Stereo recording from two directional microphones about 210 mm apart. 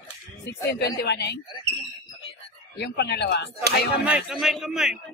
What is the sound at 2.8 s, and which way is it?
Speech, 50° left (ahead or behind).